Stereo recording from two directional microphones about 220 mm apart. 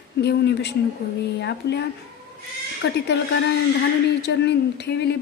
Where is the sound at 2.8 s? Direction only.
50° left (ahead or behind).